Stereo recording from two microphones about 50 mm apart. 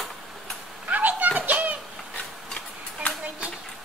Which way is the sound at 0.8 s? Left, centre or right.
Right.